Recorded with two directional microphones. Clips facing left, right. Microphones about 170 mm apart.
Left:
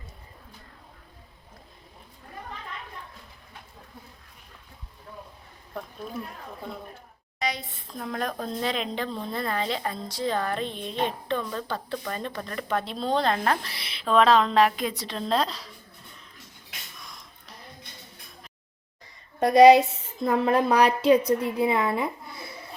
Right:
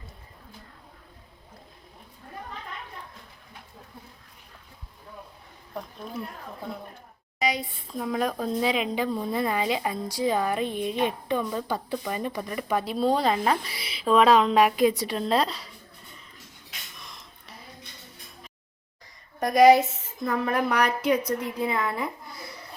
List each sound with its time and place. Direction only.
7.3 s a woman's voice: 5° right (ahead or behind)
17.0 s a sound: centre (ahead or behind)
19.4 s a woman's voice: 30° left (ahead or behind)